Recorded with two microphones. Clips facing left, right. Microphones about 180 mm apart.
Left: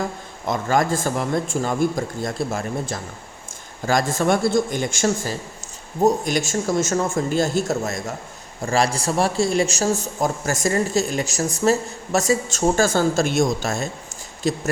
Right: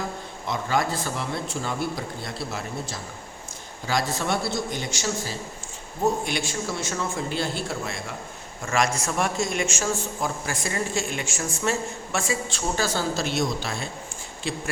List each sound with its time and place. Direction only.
0.4 s speech: 45° left (ahead or behind)
8.6 s a man's voice: 35° left (ahead or behind)